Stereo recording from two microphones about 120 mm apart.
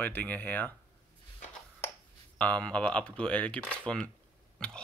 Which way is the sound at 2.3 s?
10° left (ahead or behind).